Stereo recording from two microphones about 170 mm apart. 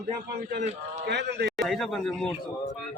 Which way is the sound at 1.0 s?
85° right.